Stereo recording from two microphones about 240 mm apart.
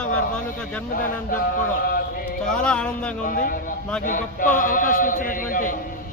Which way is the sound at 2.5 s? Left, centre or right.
Centre.